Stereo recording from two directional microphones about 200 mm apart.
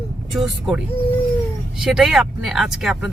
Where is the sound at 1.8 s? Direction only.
Centre (ahead or behind).